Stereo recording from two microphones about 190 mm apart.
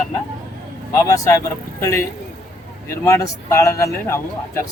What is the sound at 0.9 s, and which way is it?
A man's voice, 15° left (ahead or behind).